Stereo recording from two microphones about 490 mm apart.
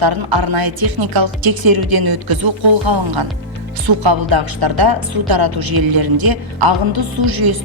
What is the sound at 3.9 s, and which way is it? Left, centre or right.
Speech, right.